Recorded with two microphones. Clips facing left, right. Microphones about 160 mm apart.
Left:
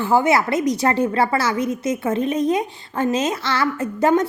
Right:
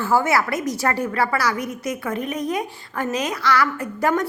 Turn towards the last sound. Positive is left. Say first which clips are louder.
# left 4 dB
turn(degrees=25)  # may be behind; listen again after turning